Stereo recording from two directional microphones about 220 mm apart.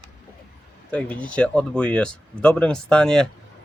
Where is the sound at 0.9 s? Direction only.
5° left (ahead or behind).